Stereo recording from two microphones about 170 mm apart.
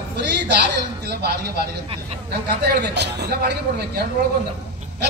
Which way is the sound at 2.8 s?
80° right.